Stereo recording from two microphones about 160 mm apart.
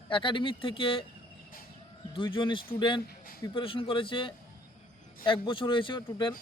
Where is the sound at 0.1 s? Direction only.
30° left (ahead or behind).